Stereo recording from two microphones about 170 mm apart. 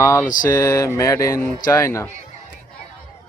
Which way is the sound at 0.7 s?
20° left (ahead or behind).